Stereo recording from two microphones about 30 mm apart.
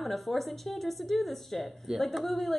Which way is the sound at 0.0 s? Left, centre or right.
Centre.